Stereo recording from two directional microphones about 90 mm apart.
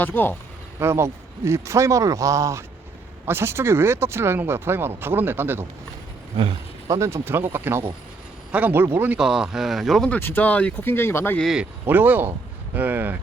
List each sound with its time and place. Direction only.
0.0 s speech: 20° left (ahead or behind)
0.8 s speech: 30° right (ahead or behind)
6.8 s speech: 35° right (ahead or behind)
9.1 s speech: 5° right (ahead or behind)
10.2 s speech: 25° left (ahead or behind)
11.9 s speech: 20° right (ahead or behind)